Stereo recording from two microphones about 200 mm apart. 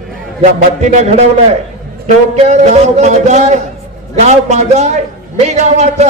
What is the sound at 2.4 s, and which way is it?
A man's voice, 35° right (ahead or behind).